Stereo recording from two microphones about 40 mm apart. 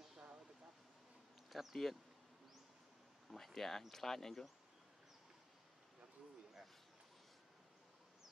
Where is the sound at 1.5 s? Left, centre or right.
Centre.